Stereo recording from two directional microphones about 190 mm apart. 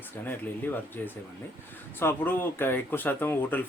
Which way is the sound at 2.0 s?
10° left (ahead or behind).